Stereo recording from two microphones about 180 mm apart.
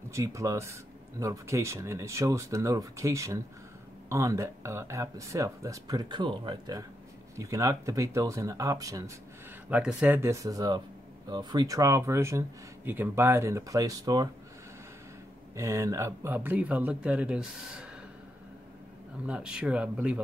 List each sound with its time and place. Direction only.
0.1 s speech: 15° right (ahead or behind)
9.7 s speech: 5° right (ahead or behind)
15.5 s speech: 15° right (ahead or behind)
19.2 s speech: 5° right (ahead or behind)